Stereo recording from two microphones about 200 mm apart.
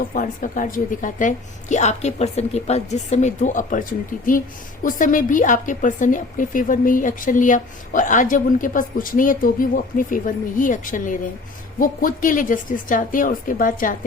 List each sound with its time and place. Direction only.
0.1 s speech: 40° left (ahead or behind)